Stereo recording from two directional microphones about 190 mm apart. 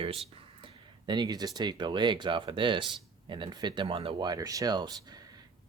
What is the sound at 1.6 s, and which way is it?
Speech, 25° right (ahead or behind).